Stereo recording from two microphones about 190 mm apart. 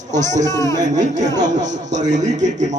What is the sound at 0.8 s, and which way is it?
Speech, 40° right (ahead or behind).